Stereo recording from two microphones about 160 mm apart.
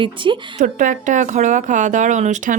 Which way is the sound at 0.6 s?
50° right (ahead or behind).